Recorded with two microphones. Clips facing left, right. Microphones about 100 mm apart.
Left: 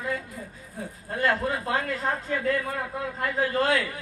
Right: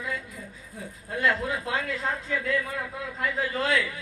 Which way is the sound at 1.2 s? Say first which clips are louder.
Left 1 dB; 45° left (ahead or behind).